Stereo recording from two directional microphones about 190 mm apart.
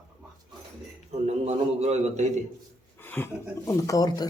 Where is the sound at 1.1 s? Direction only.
35° right (ahead or behind).